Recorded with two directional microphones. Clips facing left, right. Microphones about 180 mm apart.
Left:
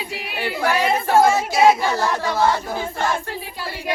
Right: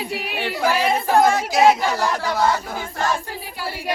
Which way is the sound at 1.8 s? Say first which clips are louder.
Even; 15° right (ahead or behind).